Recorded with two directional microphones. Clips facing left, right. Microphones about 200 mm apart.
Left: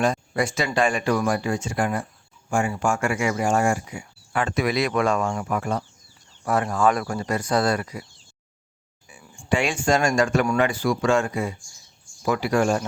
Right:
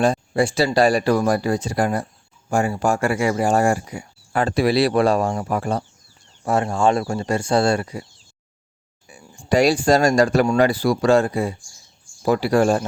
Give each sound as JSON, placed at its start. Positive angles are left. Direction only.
{"t": 0.0, "sound": "speech", "side_deg": -30}
{"t": 9.2, "sound": "speech", "side_deg": -40}